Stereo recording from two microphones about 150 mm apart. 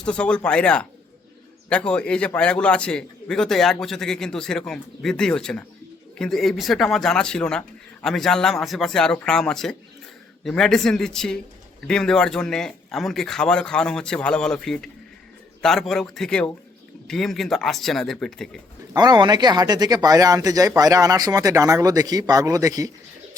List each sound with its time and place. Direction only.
0.0 s a man's voice: 5° left (ahead or behind)
18.9 s speech: 30° right (ahead or behind)